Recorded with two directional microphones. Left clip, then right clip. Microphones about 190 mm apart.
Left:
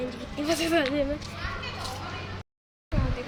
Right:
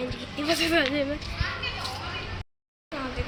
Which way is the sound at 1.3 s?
60° left (ahead or behind).